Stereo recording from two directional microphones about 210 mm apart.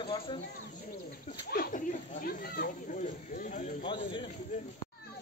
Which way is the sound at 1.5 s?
45° left (ahead or behind).